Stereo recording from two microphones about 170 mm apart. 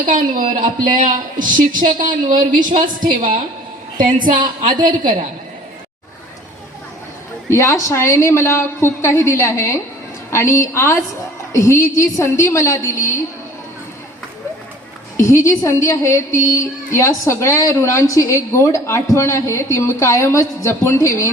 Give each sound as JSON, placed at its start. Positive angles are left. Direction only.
{"t": 0.0, "sound": "a man's voice", "side_deg": -50}
{"t": 7.5, "sound": "a woman's voice", "side_deg": 15}
{"t": 15.2, "sound": "a woman's voice", "side_deg": 15}